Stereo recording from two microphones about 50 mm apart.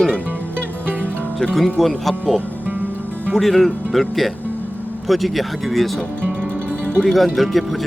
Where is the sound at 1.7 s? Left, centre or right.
Centre.